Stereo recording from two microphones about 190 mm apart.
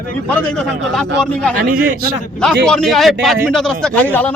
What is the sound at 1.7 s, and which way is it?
Speech, 50° right (ahead or behind).